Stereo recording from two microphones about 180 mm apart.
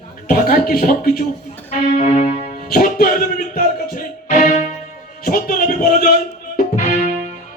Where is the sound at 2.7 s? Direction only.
50° left (ahead or behind).